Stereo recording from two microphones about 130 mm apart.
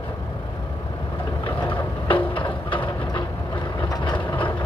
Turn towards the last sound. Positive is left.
turn(degrees=40)  # may be behind; listen again after turning